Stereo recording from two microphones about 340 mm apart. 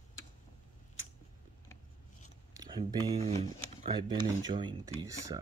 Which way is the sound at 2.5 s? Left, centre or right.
Centre.